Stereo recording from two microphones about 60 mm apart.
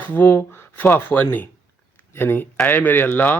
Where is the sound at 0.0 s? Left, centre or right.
Left.